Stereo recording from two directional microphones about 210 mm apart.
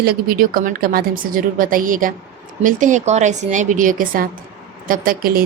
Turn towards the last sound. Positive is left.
turn(degrees=-45)  # may be behind; listen again after turning